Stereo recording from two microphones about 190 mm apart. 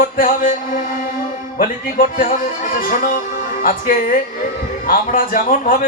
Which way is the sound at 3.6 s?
50° left (ahead or behind).